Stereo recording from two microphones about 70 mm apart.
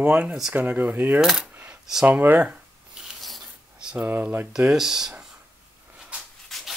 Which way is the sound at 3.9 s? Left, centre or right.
Right.